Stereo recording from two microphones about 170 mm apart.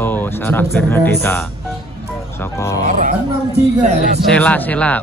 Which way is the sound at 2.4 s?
15° left (ahead or behind).